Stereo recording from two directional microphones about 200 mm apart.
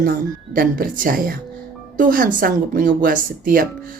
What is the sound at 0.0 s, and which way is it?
Speech, 45° right (ahead or behind).